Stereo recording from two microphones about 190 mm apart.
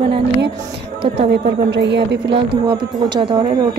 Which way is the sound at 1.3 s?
65° right (ahead or behind).